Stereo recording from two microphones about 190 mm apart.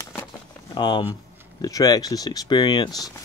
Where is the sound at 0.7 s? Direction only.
25° left (ahead or behind).